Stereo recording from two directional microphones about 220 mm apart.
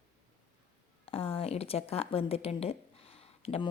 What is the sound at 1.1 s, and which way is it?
A woman's voice, 25° left (ahead or behind).